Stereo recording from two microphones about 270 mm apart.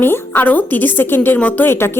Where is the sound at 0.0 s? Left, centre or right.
Centre.